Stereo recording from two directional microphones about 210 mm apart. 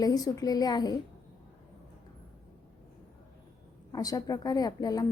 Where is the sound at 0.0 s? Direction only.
20° left (ahead or behind).